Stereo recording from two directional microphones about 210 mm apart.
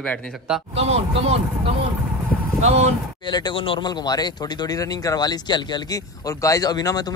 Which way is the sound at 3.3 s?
20° left (ahead or behind).